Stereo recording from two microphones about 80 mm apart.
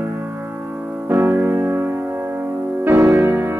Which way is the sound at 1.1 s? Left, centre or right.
Right.